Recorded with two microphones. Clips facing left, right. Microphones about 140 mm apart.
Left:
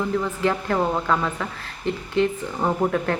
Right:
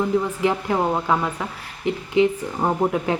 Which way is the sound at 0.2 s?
15° right (ahead or behind).